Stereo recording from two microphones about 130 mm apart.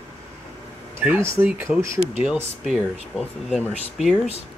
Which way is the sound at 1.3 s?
15° right (ahead or behind).